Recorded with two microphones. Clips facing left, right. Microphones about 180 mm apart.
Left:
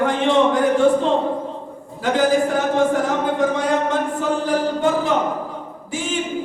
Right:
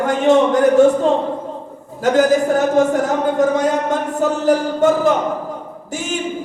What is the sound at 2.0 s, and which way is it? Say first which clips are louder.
Speech: right 4 dB; 45° right (ahead or behind).